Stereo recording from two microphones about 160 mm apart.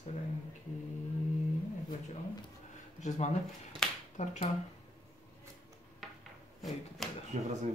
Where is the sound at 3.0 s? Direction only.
50° left (ahead or behind).